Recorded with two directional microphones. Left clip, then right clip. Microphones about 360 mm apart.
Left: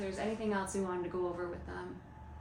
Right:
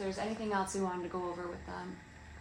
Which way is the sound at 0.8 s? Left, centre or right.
Right.